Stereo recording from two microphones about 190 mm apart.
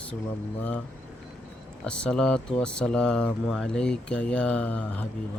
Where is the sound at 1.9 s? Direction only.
5° left (ahead or behind).